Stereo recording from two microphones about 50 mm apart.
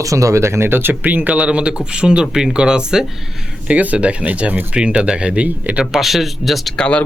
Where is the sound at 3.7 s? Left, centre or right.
Right.